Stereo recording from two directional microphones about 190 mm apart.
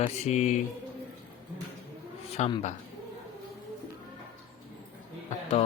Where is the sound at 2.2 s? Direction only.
30° left (ahead or behind).